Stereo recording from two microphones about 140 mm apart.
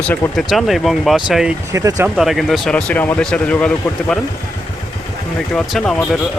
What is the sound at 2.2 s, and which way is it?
Speech, centre (ahead or behind).